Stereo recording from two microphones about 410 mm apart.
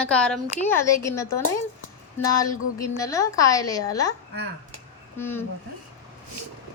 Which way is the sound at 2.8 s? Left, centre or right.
Centre.